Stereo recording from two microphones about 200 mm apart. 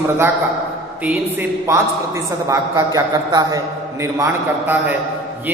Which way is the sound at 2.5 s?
15° right (ahead or behind).